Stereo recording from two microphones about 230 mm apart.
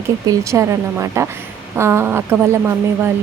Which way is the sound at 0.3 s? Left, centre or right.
Centre.